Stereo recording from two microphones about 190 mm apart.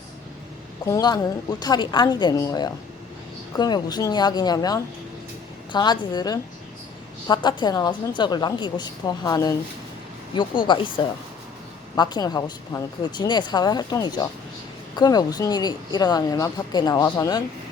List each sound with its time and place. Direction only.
0.9 s speech: 20° left (ahead or behind)
10.7 s speech: 25° left (ahead or behind)